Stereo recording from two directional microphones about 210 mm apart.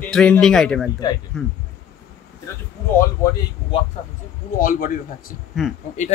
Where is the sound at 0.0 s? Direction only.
5° left (ahead or behind).